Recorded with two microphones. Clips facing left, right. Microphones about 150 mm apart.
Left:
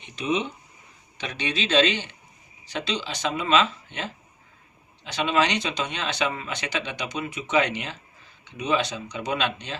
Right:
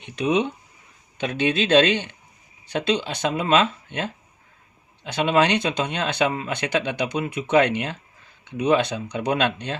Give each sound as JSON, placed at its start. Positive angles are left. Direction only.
{"t": 0.2, "sound": "speech", "side_deg": -65}
{"t": 1.2, "sound": "speech", "side_deg": -50}